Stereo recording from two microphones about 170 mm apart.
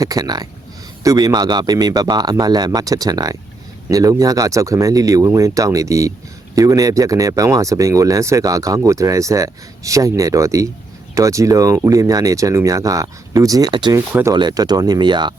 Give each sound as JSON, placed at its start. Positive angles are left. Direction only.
{"t": 0.0, "sound": "speech", "side_deg": -20}
{"t": 14.1, "sound": "speech", "side_deg": -15}
{"t": 14.3, "sound": "speech", "side_deg": -25}